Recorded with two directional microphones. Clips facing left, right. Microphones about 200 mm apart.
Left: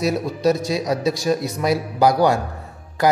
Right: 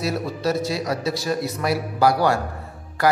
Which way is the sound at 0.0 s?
15° left (ahead or behind).